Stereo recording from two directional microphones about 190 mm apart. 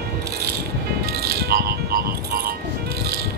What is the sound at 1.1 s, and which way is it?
Music, 55° right (ahead or behind).